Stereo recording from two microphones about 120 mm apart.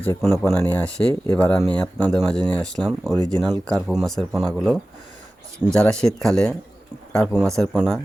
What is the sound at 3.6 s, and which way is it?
Speech, 5° left (ahead or behind).